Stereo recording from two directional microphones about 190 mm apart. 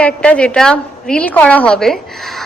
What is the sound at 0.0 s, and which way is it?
A woman's voice, 5° left (ahead or behind).